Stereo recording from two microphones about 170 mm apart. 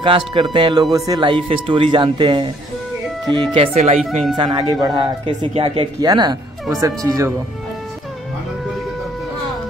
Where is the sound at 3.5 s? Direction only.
40° right (ahead or behind).